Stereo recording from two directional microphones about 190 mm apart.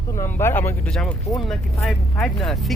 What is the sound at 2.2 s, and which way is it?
Speech, centre (ahead or behind).